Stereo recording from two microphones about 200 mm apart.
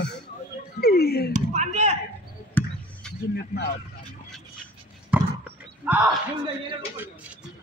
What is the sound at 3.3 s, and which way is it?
Speech, 55° left (ahead or behind).